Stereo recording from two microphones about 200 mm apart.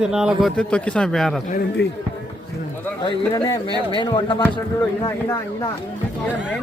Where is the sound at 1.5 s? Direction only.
50° left (ahead or behind).